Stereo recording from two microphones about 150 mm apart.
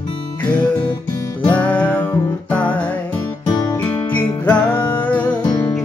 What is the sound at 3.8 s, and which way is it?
Music, 10° left (ahead or behind).